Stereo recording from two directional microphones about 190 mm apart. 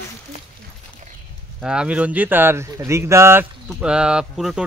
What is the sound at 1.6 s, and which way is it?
Speech, 5° right (ahead or behind).